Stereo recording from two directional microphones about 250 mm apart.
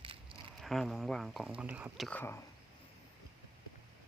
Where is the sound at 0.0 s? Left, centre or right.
Right.